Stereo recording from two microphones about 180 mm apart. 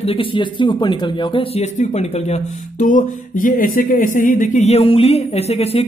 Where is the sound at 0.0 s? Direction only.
30° left (ahead or behind).